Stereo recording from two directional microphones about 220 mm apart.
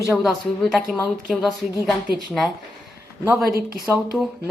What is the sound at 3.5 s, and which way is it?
Speech, 40° right (ahead or behind).